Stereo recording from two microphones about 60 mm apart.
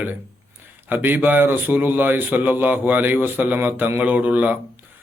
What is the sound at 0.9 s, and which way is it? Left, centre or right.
A man's voice, right.